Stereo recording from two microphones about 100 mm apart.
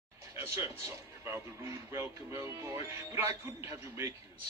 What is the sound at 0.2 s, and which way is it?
Speech, 30° right (ahead or behind).